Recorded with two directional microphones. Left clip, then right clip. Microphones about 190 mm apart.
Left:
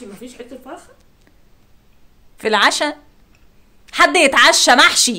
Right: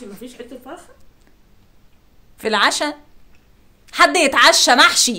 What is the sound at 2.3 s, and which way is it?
A woman's voice, 15° left (ahead or behind).